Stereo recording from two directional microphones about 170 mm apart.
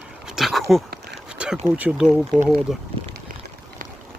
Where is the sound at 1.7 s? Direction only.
10° right (ahead or behind).